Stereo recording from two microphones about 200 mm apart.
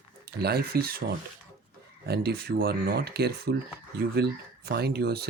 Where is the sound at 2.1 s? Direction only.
50° right (ahead or behind).